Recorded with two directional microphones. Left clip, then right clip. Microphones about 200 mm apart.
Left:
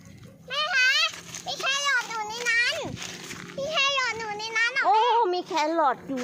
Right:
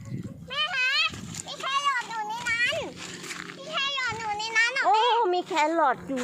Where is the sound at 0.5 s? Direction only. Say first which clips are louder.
Left 3 dB; 55° left (ahead or behind).